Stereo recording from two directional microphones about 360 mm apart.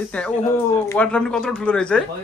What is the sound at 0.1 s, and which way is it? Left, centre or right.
Speech, centre.